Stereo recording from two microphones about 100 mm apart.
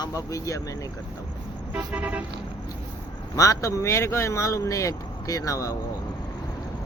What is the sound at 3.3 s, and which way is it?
Speech, 35° left (ahead or behind).